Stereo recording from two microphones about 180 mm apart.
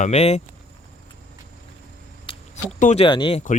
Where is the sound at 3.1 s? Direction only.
25° left (ahead or behind).